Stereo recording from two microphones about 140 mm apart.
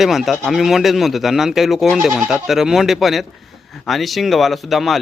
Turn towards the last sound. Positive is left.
turn(degrees=0)  # may be behind; listen again after turning